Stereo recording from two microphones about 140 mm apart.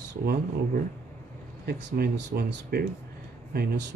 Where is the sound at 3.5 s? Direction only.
90° right.